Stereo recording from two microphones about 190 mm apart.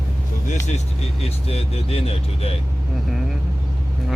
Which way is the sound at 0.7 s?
35° left (ahead or behind).